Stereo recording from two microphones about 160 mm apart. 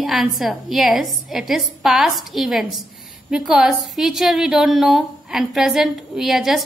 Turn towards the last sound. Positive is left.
turn(degrees=0)  # may be behind; listen again after turning